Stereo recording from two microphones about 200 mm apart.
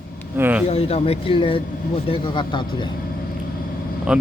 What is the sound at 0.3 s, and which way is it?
Speech, 10° right (ahead or behind).